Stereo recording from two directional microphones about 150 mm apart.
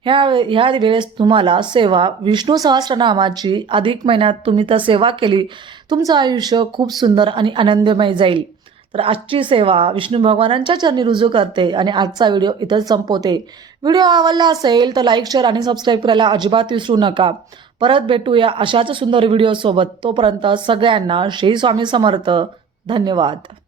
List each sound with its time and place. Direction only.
0.0 s a man's voice: 35° right (ahead or behind)